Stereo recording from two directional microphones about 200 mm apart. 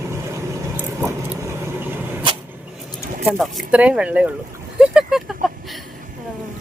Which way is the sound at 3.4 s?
5° right (ahead or behind).